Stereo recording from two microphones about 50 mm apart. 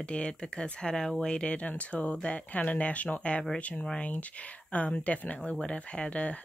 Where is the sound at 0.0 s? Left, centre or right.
Left.